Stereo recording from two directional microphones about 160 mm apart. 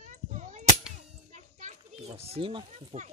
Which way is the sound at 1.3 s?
50° right (ahead or behind).